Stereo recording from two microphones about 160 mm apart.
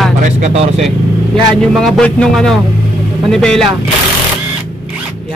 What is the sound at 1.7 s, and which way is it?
Speech, centre (ahead or behind).